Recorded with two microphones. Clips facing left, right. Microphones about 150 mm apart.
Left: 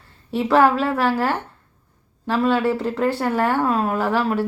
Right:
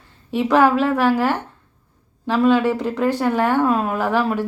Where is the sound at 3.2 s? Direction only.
10° left (ahead or behind).